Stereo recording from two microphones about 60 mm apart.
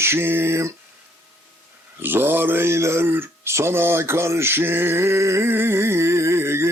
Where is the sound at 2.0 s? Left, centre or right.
Right.